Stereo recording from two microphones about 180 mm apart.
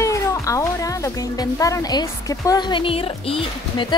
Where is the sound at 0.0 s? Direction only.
15° left (ahead or behind).